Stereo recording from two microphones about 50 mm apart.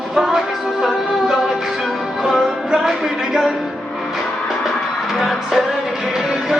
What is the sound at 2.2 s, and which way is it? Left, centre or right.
Music, centre.